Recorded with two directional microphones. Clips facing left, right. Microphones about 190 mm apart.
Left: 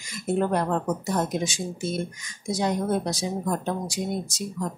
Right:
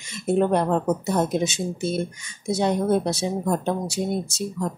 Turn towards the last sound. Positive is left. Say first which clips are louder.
# right 3 dB
turn(degrees=-25)  # may be behind; listen again after turning